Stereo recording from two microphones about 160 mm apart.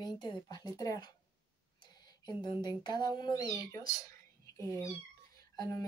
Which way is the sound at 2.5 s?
25° left (ahead or behind).